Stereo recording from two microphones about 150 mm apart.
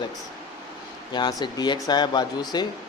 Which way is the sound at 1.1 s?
30° left (ahead or behind).